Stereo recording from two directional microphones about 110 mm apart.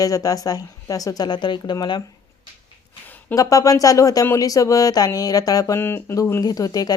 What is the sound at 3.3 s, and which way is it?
Speech, 30° left (ahead or behind).